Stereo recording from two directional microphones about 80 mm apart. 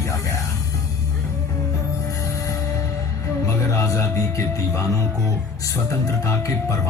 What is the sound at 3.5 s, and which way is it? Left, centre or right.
Music, left.